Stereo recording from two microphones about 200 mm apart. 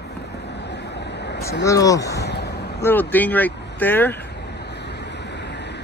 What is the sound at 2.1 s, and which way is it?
Vehicle, 55° left (ahead or behind).